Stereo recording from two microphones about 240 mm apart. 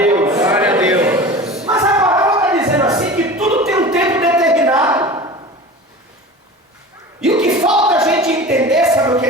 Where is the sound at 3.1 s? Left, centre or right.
Centre.